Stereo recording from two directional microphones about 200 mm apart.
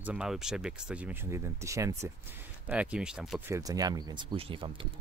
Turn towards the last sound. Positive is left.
turn(degrees=-25)  # may be behind; listen again after turning